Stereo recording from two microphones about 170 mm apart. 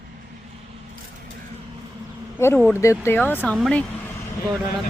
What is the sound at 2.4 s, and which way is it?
Speech, 15° left (ahead or behind).